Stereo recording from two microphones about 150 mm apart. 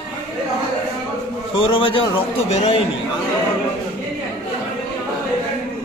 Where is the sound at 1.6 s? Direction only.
35° left (ahead or behind).